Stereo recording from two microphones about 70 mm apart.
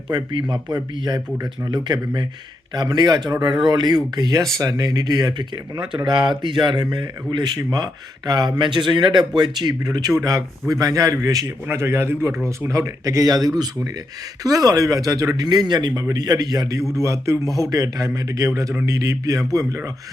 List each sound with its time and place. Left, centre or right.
0.1 s a man's voice: right
3.4 s speech: right
4.5 s speech: right
6.4 s speech: right
10.2 s speech: right
11.7 s a man's voice: right
15.4 s speech: right
16.0 s speech: right
16.9 s speech: right